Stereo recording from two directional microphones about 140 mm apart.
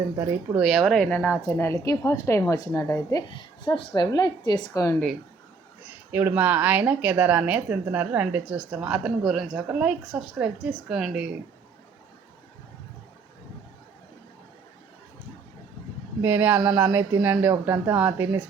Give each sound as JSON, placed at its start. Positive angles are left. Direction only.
{"t": 0.5, "sound": "a woman's voice", "side_deg": -5}
{"t": 6.1, "sound": "speech", "side_deg": -15}
{"t": 16.2, "sound": "speech", "side_deg": -15}